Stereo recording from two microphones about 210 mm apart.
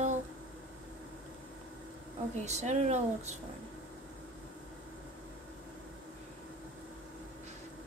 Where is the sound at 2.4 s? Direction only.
35° right (ahead or behind).